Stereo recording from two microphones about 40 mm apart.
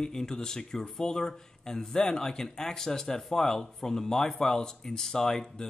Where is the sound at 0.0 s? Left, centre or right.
Centre.